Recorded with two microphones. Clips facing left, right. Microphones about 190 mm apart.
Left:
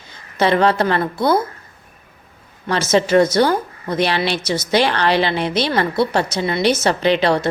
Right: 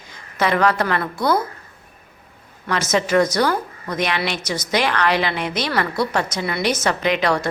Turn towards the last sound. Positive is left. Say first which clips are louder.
# left 4 dB
turn(degrees=30)  # may be behind; listen again after turning